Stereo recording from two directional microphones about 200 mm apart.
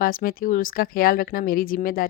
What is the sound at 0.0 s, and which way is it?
Speech, 45° left (ahead or behind).